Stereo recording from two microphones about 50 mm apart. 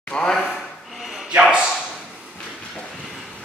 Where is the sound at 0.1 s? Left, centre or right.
Centre.